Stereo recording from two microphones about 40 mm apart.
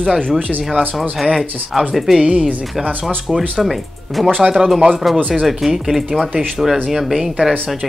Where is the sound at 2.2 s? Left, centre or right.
Right.